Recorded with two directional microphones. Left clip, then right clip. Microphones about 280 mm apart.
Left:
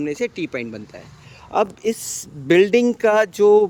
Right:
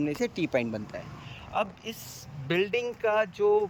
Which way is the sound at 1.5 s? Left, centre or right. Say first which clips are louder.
Left 11 dB; left.